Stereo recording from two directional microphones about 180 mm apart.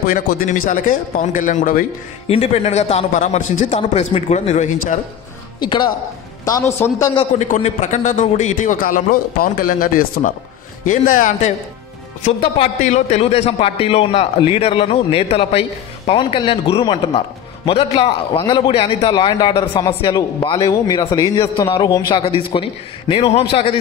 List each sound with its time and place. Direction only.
0.0 s a man's voice: 55° left (ahead or behind)
2.2 s a man's voice: 35° left (ahead or behind)
5.6 s a man's voice: 25° left (ahead or behind)
7.2 s a man's voice: 40° left (ahead or behind)
12.3 s a man's voice: 30° left (ahead or behind)